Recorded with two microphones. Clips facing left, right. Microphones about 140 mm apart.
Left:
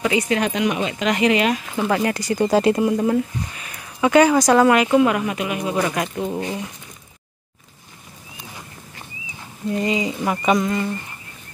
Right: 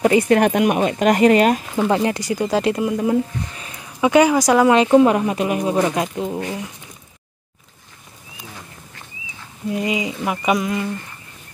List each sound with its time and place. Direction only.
0.3 s speech: 50° right (ahead or behind)
1.9 s speech: 25° right (ahead or behind)
2.4 s speech: centre (ahead or behind)
3.5 s a sound: 30° right (ahead or behind)
4.0 s speech: 15° right (ahead or behind)
4.7 s speech: 30° right (ahead or behind)
5.8 s speech: 20° right (ahead or behind)
6.0 s speech: 10° right (ahead or behind)
9.7 s speech: 10° right (ahead or behind)